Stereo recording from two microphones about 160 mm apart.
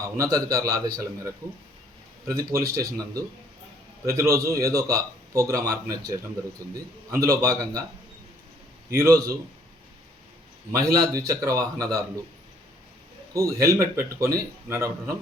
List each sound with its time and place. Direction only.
0.0 s a man's voice: 20° right (ahead or behind)
2.3 s a man's voice: 20° right (ahead or behind)
9.0 s a man's voice: 20° right (ahead or behind)
10.7 s a man's voice: 20° right (ahead or behind)
13.3 s a man's voice: 20° right (ahead or behind)